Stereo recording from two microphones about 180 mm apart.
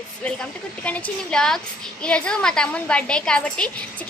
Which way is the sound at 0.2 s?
5° left (ahead or behind).